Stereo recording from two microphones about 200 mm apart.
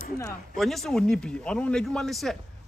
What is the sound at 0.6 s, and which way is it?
A man's voice, centre (ahead or behind).